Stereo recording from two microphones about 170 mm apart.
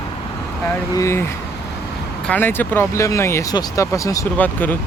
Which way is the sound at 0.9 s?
15° left (ahead or behind).